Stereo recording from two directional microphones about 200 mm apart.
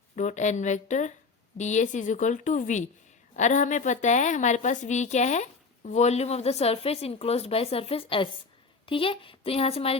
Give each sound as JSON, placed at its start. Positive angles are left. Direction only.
{"t": 0.2, "sound": "a woman's voice", "side_deg": 35}